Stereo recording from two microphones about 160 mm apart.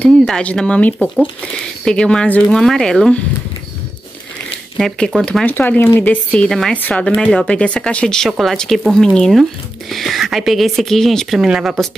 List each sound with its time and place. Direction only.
0.0 s speech: 10° left (ahead or behind)
4.7 s speech: 5° left (ahead or behind)